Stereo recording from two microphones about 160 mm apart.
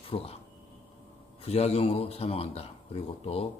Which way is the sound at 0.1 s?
35° left (ahead or behind).